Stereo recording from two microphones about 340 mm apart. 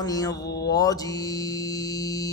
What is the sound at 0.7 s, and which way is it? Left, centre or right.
Music, centre.